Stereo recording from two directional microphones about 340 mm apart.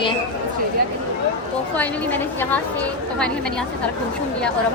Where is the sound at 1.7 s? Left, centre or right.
Centre.